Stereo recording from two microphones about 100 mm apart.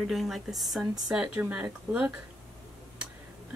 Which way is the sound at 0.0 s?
Centre (ahead or behind).